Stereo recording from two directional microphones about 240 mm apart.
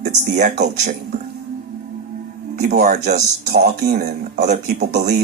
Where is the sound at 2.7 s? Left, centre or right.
Right.